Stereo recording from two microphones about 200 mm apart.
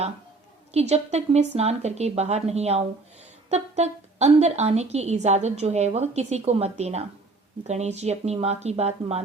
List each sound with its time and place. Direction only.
0.7 s a woman's voice: 30° right (ahead or behind)